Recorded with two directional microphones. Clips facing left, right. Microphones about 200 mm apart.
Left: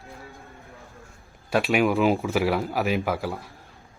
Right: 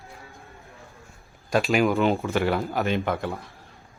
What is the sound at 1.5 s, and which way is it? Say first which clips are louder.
Speech: even; 5° left (ahead or behind).